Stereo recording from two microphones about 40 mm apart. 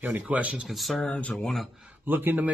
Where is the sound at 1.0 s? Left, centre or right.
Left.